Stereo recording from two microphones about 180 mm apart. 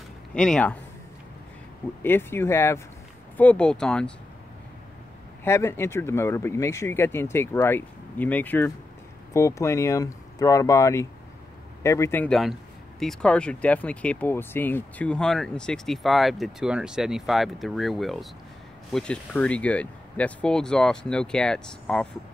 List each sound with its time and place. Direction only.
0.3 s speech: 5° left (ahead or behind)
2.0 s speech: 10° left (ahead or behind)
5.4 s speech: 15° left (ahead or behind)